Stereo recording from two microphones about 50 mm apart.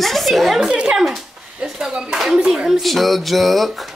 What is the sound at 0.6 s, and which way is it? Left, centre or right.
Speech, centre.